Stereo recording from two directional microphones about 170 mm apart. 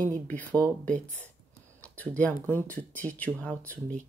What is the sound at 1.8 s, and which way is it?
Speech, 10° left (ahead or behind).